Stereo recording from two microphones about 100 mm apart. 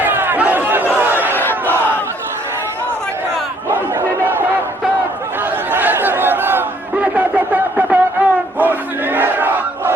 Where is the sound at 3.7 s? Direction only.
20° right (ahead or behind).